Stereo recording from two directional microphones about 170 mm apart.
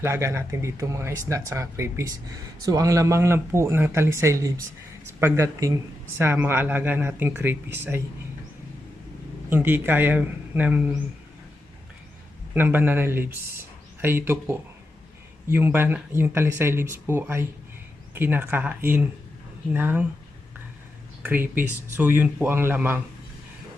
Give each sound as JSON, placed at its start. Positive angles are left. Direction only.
{"t": 0.0, "sound": "speech", "side_deg": -15}
{"t": 9.5, "sound": "speech", "side_deg": -10}
{"t": 12.5, "sound": "speech", "side_deg": -10}
{"t": 21.2, "sound": "speech", "side_deg": -10}